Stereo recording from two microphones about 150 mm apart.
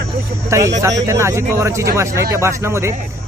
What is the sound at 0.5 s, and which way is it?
Speech, 20° right (ahead or behind).